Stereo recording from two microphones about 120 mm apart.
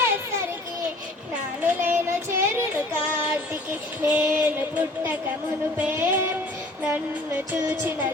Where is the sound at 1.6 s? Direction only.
15° right (ahead or behind).